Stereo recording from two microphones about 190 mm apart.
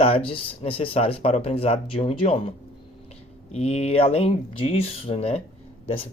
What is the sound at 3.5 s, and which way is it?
Speech, 35° left (ahead or behind).